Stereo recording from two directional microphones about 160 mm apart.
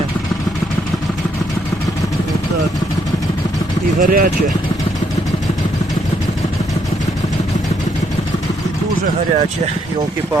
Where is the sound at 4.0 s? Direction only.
60° right (ahead or behind).